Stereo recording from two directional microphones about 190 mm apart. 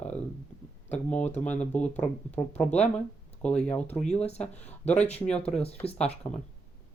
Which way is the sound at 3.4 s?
5° left (ahead or behind).